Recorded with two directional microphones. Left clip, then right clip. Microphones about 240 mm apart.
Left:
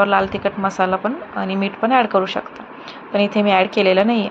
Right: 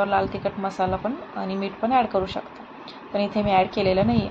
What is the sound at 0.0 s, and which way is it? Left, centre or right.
A woman's voice, centre.